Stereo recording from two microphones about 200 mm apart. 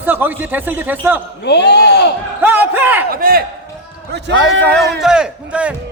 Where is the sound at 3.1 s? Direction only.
45° right (ahead or behind).